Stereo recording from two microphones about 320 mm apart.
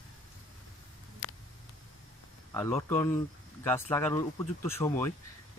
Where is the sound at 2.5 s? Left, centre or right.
Centre.